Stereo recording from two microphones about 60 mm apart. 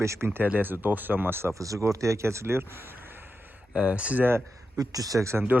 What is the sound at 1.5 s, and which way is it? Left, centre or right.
Speech, right.